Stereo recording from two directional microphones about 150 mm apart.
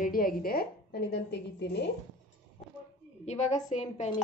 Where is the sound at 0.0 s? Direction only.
75° left (ahead or behind).